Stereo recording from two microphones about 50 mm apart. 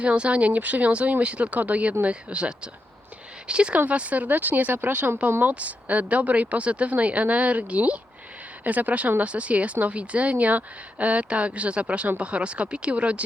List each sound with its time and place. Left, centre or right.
0.0 s a woman's voice: right